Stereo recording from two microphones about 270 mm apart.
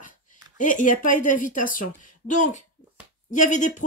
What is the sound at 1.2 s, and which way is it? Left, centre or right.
Speech, left.